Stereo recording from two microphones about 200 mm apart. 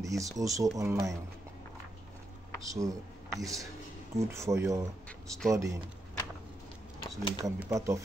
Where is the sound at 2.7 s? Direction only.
15° right (ahead or behind).